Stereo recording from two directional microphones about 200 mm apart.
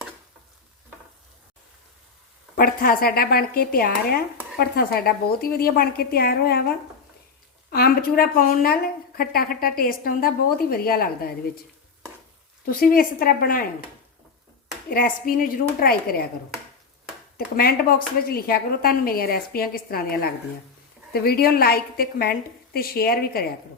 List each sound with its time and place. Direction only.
2.6 s a woman's voice: 45° left (ahead or behind)
12.6 s a woman's voice: 45° left (ahead or behind)
14.8 s a woman's voice: 45° left (ahead or behind)
17.3 s a woman's voice: 50° left (ahead or behind)